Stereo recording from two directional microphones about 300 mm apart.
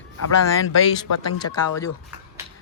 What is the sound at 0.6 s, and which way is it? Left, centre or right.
Speech, left.